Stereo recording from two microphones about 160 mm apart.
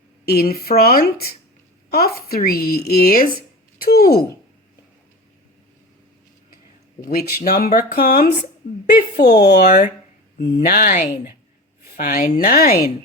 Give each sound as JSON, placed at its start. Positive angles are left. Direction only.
{"t": 0.3, "sound": "a woman's voice", "side_deg": 75}
{"t": 7.0, "sound": "a woman's voice", "side_deg": 70}
{"t": 8.9, "sound": "speech", "side_deg": 90}
{"t": 10.4, "sound": "a woman's voice", "side_deg": 70}